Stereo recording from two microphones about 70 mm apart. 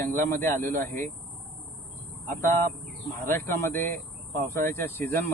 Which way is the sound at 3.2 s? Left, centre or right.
Left.